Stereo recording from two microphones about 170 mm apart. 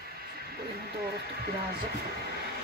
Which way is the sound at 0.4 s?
70° right (ahead or behind).